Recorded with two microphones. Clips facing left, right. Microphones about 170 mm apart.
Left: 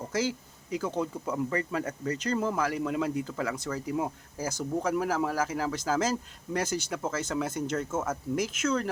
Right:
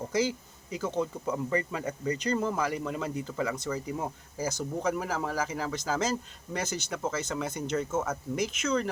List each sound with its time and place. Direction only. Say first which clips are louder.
0.1 s speech: right 1 dB; 5° left (ahead or behind)